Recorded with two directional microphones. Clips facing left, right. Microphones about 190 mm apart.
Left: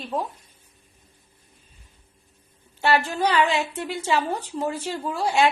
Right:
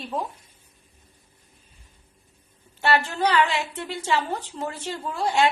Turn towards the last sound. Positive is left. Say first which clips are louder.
# left 1 dB
turn(degrees=10)  # may be behind; listen again after turning